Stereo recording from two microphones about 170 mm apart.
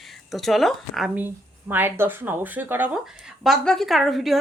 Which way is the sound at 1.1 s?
10° right (ahead or behind).